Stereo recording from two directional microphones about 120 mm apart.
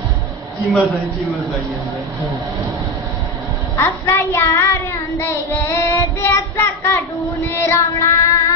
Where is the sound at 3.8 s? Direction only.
20° left (ahead or behind).